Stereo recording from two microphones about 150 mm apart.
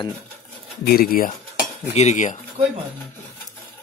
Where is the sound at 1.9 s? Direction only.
50° left (ahead or behind).